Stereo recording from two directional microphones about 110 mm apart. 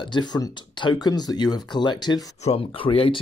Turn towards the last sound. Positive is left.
turn(degrees=55)  # may be behind; listen again after turning